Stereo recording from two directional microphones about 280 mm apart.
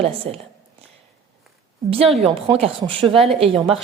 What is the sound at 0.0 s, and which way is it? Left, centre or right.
Speech, right.